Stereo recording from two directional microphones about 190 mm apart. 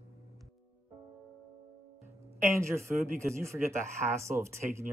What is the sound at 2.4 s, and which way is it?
Speech, 15° right (ahead or behind).